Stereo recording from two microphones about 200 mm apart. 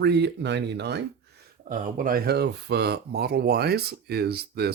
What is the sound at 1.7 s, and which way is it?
Speech, 40° right (ahead or behind).